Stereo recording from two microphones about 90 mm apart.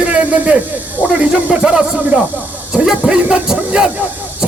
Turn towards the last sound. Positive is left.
turn(degrees=-10)  # may be behind; listen again after turning